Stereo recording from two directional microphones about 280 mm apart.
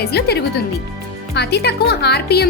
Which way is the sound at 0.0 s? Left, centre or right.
Left.